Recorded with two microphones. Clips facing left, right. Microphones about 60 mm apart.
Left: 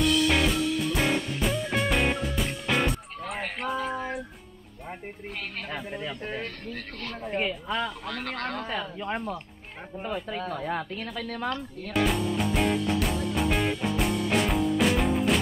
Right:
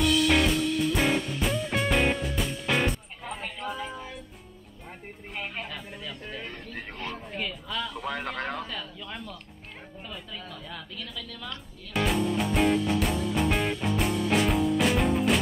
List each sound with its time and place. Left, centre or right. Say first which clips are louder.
0.0 s music: even; centre
3.3 s a sound: left 3 dB; left
3.6 s female singing: left 5 dB; centre
5.9 s speech: left 5 dB; left
6.4 s speech: left 2 dB; centre
7.3 s speech: left 7 dB; left
8.1 s speech: even; centre
8.6 s speech: left 7 dB; left
11.9 s music: even; centre